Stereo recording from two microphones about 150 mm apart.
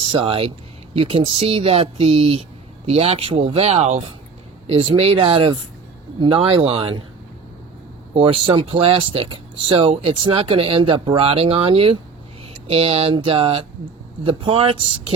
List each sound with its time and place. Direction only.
0.0 s speech: 35° right (ahead or behind)
8.1 s speech: 35° right (ahead or behind)